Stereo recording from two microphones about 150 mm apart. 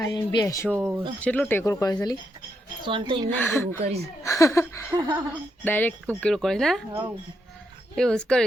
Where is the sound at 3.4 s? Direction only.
10° left (ahead or behind).